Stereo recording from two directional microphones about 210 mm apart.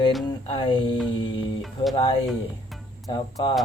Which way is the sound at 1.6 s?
Centre (ahead or behind).